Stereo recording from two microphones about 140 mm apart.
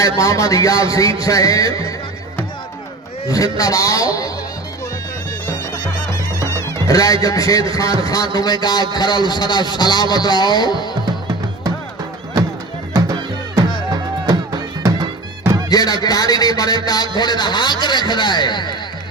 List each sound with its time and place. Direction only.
0.2 s a man's voice: 25° left (ahead or behind)
3.2 s a man's voice: 25° left (ahead or behind)
5.7 s music: 25° left (ahead or behind)
6.8 s a man's voice: 25° left (ahead or behind)
13.9 s music: 25° right (ahead or behind)
15.7 s a man's voice: 30° left (ahead or behind)